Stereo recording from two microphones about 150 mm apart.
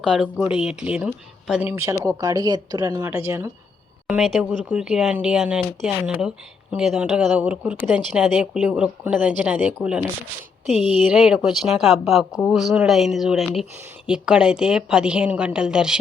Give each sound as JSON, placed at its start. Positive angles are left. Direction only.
{"t": 0.0, "sound": "a woman's voice", "side_deg": 0}
{"t": 4.0, "sound": "a woman's voice", "side_deg": 0}
{"t": 11.1, "sound": "a woman's voice", "side_deg": -5}